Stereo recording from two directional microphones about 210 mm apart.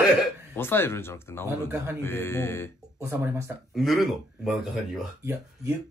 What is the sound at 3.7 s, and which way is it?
Speech, centre (ahead or behind).